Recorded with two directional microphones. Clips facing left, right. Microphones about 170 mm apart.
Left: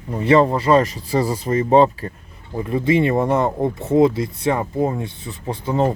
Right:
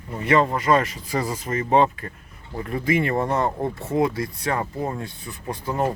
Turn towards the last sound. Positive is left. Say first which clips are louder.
# left 5 dB
turn(degrees=25)  # may be behind; listen again after turning